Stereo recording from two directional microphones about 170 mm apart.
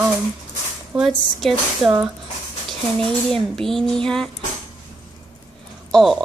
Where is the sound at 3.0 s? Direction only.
5° left (ahead or behind).